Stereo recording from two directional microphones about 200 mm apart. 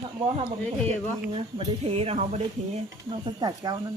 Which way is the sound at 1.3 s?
30° right (ahead or behind).